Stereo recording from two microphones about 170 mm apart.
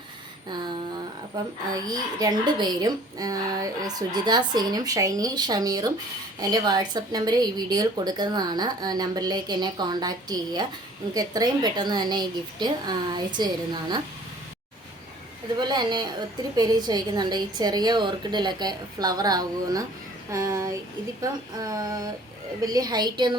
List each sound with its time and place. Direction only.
1.7 s speech: 20° right (ahead or behind)
15.6 s speech: 25° right (ahead or behind)